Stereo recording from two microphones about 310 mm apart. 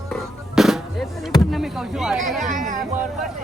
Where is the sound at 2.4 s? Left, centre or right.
Right.